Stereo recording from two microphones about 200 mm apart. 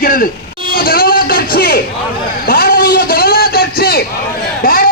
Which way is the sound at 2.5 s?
50° left (ahead or behind).